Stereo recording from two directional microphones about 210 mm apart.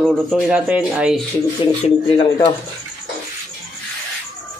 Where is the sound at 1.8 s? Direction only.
25° left (ahead or behind).